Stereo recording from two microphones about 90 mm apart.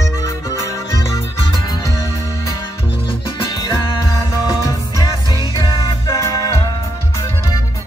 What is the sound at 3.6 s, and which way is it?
Music, 40° left (ahead or behind).